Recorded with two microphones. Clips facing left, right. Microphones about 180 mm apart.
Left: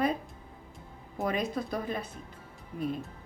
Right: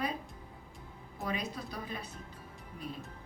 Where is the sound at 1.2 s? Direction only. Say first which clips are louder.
Left 7 dB; 50° left (ahead or behind).